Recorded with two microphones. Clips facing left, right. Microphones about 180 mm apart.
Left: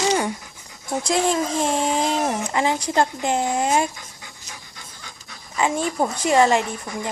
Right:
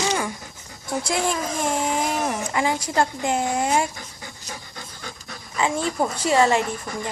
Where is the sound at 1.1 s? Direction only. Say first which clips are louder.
Left 5 dB; 25° left (ahead or behind).